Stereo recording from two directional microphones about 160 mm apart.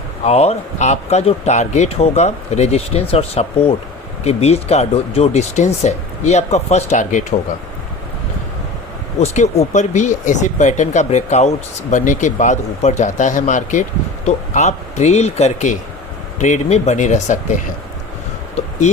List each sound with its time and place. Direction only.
0.3 s speech: 40° left (ahead or behind)
9.2 s speech: 45° left (ahead or behind)